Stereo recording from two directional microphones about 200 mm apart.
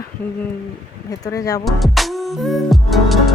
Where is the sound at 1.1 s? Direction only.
15° left (ahead or behind).